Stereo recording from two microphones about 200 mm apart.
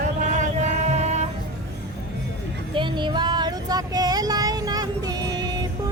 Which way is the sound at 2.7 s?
25° right (ahead or behind).